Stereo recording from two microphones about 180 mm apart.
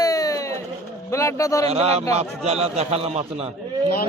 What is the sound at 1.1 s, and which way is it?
Speech, 15° left (ahead or behind).